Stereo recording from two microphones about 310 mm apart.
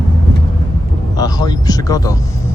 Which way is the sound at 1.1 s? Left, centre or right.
Centre.